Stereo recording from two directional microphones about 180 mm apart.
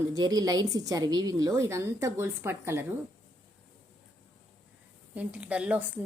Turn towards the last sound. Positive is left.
turn(degrees=-5)  # may be behind; listen again after turning